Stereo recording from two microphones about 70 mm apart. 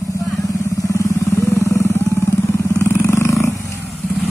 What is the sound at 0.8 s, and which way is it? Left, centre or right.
Vehicle, left.